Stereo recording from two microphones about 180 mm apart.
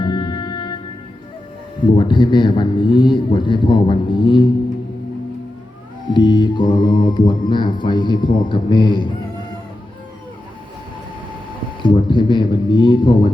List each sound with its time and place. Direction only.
0.0 s music: 25° left (ahead or behind)
2.0 s a man's voice: 25° left (ahead or behind)
6.1 s a man's voice: 25° left (ahead or behind)
11.8 s speech: 25° left (ahead or behind)